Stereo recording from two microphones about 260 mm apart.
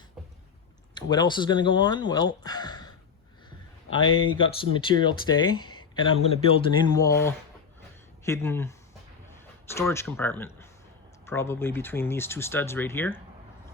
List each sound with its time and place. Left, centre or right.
1.1 s speech: centre
9.7 s speech: centre